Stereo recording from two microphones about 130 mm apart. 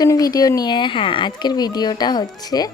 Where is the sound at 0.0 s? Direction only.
30° left (ahead or behind).